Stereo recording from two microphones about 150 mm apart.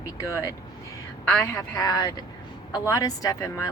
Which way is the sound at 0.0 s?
20° left (ahead or behind).